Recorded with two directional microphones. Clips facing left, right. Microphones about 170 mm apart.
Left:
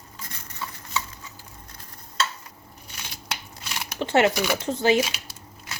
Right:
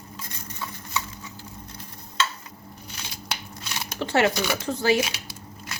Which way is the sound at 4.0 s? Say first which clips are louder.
Left 2 dB; 20° left (ahead or behind).